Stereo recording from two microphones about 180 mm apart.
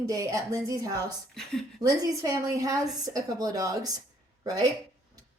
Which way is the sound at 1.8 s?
20° right (ahead or behind).